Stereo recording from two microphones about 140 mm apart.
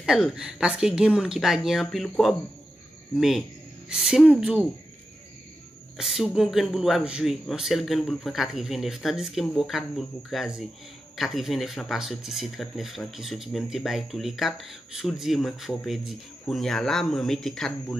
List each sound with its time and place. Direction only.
0.0 s speech: 5° right (ahead or behind)
5.9 s speech: 5° right (ahead or behind)